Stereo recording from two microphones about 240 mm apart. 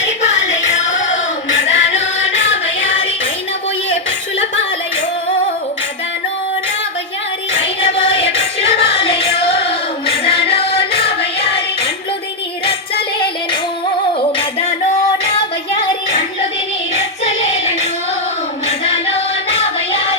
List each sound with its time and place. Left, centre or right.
0.2 s music: left
1.6 s music: left
2.0 s music: left
8.4 s music: left
13.1 s music: centre
16.9 s child singing: left
18.9 s music: left